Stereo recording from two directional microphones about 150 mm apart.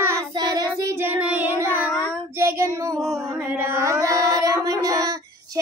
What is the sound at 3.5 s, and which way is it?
Child singing, 15° right (ahead or behind).